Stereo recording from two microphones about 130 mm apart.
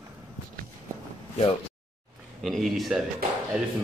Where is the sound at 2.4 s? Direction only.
Centre (ahead or behind).